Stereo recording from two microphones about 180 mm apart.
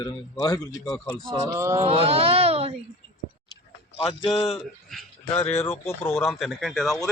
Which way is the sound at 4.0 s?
30° left (ahead or behind).